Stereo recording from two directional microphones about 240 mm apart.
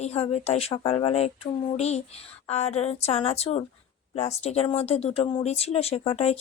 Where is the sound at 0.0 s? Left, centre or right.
Left.